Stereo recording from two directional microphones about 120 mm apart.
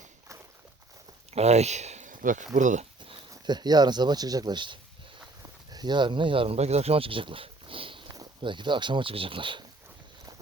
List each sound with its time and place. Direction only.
1.3 s speech: 65° right (ahead or behind); by 2.8 s 90° right
3.0 s speech: 40° right (ahead or behind)